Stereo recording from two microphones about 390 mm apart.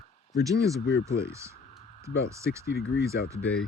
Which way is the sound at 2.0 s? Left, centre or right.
Centre.